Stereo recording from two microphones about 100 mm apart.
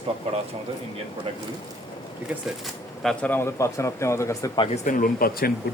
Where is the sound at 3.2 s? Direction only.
20° left (ahead or behind).